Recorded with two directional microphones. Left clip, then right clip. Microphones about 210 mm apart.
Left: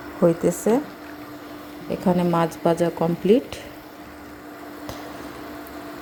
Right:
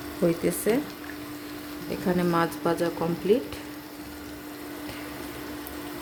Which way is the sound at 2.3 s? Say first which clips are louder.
Left 5 dB; 10° left (ahead or behind).